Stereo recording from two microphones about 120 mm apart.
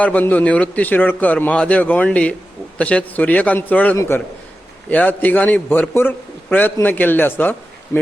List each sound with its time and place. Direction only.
0.0 s a man's voice: 10° left (ahead or behind)